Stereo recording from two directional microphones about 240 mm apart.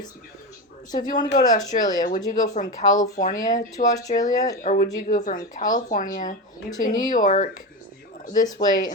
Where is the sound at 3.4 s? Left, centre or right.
Centre.